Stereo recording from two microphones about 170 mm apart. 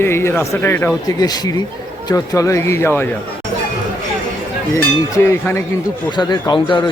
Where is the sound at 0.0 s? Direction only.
15° left (ahead or behind).